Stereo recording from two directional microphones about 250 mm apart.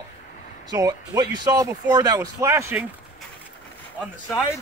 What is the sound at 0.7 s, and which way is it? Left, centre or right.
Speech, centre.